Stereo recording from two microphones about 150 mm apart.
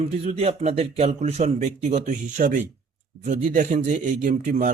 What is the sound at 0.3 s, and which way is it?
Speech, 45° right (ahead or behind).